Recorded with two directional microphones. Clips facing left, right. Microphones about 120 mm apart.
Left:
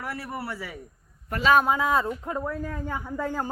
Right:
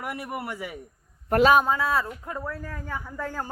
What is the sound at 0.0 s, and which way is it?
Speech, 15° right (ahead or behind).